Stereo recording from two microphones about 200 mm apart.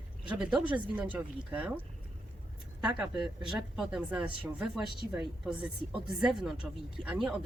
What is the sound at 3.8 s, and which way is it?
Speech, 5° right (ahead or behind).